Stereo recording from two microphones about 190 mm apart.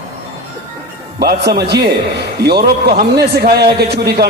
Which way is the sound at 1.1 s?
55° right (ahead or behind).